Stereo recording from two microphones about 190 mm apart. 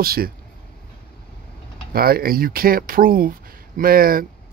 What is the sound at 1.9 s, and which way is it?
Speech, 50° right (ahead or behind).